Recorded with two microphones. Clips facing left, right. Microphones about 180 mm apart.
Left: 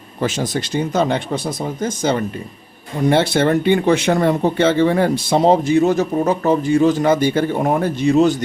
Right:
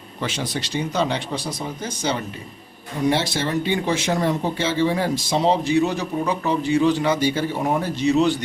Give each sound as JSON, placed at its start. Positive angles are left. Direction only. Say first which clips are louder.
{"t": 0.2, "sound": "speech", "louder": "left 6 dB", "side_deg": 45}